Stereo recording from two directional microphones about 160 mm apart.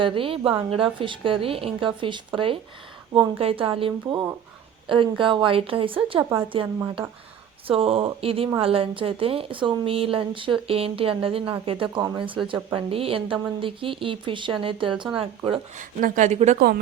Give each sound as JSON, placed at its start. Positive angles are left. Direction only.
{"t": 0.0, "sound": "a woman's voice", "side_deg": -35}
{"t": 4.1, "sound": "a woman's voice", "side_deg": -20}
{"t": 7.7, "sound": "a woman's voice", "side_deg": -35}
{"t": 15.8, "sound": "speech", "side_deg": -55}
{"t": 16.6, "sound": "speech", "side_deg": -80}